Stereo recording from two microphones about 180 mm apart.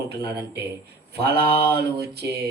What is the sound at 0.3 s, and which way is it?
Mantra, 65° right (ahead or behind).